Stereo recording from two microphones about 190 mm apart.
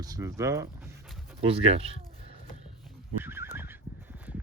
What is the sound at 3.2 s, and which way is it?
Neigh, 10° right (ahead or behind).